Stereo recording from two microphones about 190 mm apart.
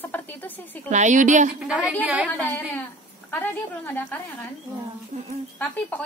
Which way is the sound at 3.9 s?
10° left (ahead or behind).